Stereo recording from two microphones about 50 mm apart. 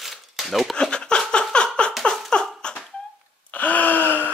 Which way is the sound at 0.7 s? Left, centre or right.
Centre.